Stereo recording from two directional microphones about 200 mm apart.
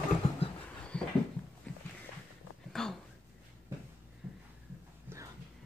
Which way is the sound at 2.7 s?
Centre (ahead or behind).